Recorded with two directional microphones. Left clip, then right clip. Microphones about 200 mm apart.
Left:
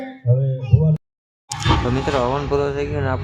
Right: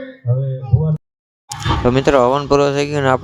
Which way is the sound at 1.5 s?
Centre (ahead or behind).